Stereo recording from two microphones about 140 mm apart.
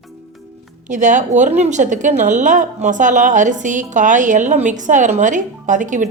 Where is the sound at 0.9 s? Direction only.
60° right (ahead or behind).